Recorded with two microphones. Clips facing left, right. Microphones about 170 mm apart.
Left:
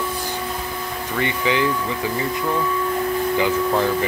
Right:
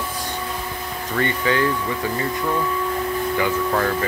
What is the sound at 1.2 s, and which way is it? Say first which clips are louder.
Speech: even; 15° left (ahead or behind).